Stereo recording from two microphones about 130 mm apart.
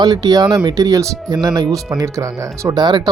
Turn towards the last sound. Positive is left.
turn(degrees=-35)  # may be behind; listen again after turning